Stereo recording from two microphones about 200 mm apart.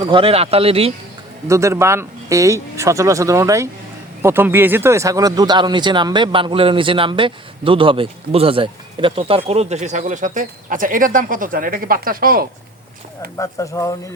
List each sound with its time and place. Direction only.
0.0 s speech: 25° right (ahead or behind)
1.5 s speech: 15° right (ahead or behind); by 12.5 s 45° right (ahead or behind)
13.3 s speech: 15° left (ahead or behind)